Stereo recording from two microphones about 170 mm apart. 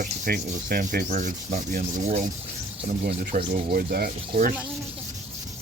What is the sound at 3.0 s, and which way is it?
Cricket, 65° right (ahead or behind).